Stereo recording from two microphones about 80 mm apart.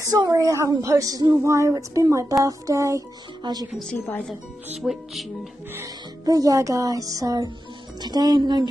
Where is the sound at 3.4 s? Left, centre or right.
Right.